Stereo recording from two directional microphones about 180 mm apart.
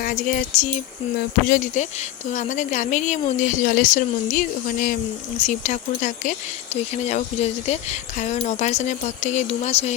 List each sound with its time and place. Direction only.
0.0 s speech: 50° left (ahead or behind)